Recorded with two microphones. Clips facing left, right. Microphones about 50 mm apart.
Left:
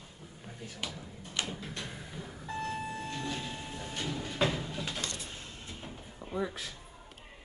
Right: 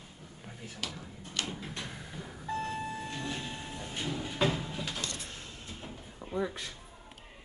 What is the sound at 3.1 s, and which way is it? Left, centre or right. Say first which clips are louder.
Train: left 1 dB; centre.